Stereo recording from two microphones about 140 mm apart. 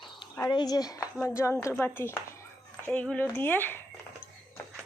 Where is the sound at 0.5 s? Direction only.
30° left (ahead or behind).